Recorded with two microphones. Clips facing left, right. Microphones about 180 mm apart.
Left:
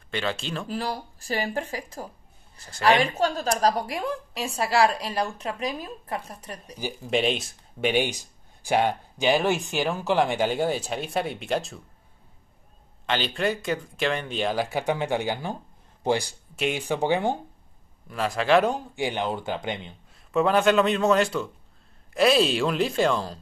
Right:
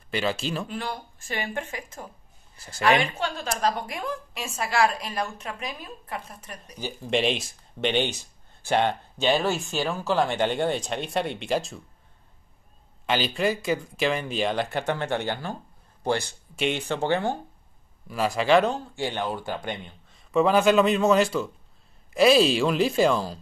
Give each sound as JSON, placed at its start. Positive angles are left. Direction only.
{"t": 0.1, "sound": "speech", "side_deg": -5}
{"t": 0.7, "sound": "a woman's voice", "side_deg": 35}
{"t": 6.8, "sound": "speech", "side_deg": 5}
{"t": 13.0, "sound": "a man's voice", "side_deg": -5}
{"t": 18.0, "sound": "speech", "side_deg": 0}
{"t": 18.7, "sound": "speech", "side_deg": 15}
{"t": 20.2, "sound": "speech", "side_deg": 0}